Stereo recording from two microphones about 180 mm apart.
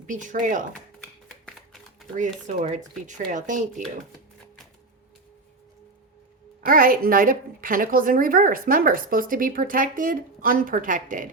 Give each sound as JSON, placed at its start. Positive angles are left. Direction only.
{"t": 0.1, "sound": "a woman's voice", "side_deg": -45}
{"t": 1.3, "sound": "a sound", "side_deg": 0}
{"t": 2.6, "sound": "a woman's voice", "side_deg": -45}
{"t": 6.7, "sound": "a woman's voice", "side_deg": -50}